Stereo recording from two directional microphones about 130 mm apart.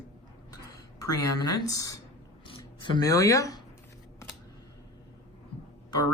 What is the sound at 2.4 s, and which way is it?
Speech, 40° left (ahead or behind).